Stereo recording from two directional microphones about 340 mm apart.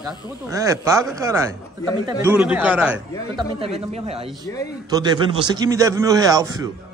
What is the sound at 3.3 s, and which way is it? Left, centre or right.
Speech, centre.